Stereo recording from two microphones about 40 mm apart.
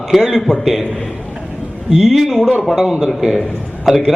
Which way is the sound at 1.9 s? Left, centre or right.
Centre.